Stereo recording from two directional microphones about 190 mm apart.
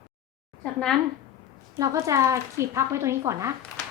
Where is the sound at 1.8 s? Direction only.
15° right (ahead or behind).